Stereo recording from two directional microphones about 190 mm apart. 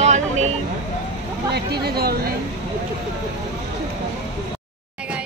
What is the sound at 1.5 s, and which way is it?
Speech, 55° right (ahead or behind).